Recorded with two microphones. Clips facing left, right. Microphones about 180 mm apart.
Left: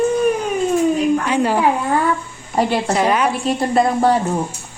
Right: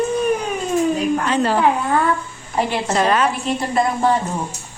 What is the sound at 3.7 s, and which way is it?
Speech, 35° left (ahead or behind).